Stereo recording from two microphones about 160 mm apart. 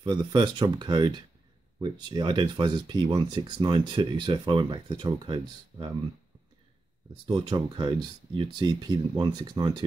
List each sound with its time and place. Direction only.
0.0 s speech: 30° right (ahead or behind)
7.2 s speech: 30° right (ahead or behind)